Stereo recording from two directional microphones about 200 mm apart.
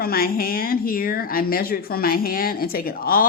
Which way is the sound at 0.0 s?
50° left (ahead or behind).